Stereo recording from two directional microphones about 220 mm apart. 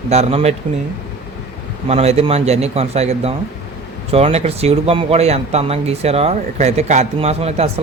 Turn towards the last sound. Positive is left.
turn(degrees=-30)  # may be behind; listen again after turning